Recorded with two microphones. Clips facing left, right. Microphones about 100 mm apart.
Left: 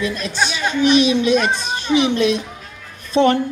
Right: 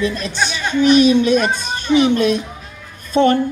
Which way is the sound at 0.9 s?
45° right (ahead or behind).